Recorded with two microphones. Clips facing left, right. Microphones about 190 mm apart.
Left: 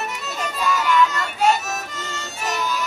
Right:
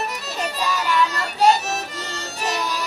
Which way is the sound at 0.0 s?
35° right (ahead or behind).